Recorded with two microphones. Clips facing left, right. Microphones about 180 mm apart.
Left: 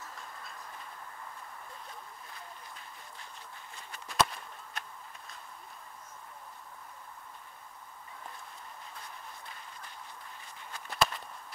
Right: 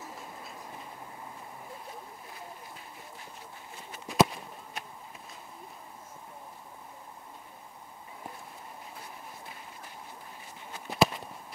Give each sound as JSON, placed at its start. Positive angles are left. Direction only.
{"t": 0.1, "sound": "train", "side_deg": -5}
{"t": 3.7, "sound": "walk", "side_deg": -5}
{"t": 10.7, "sound": "walk", "side_deg": -5}